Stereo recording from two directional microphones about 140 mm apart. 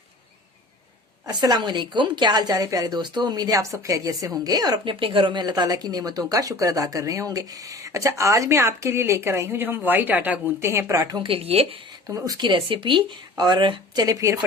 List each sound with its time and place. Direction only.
1.3 s speech: 30° right (ahead or behind)
4.9 s speech: 40° right (ahead or behind)
11.3 s speech: 45° right (ahead or behind)
12.0 s speech: 25° right (ahead or behind)